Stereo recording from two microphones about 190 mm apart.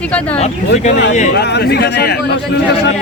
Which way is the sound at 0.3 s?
35° left (ahead or behind).